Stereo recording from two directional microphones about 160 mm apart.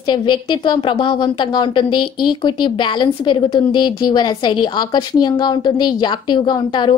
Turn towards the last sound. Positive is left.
turn(degrees=30)  # may be behind; listen again after turning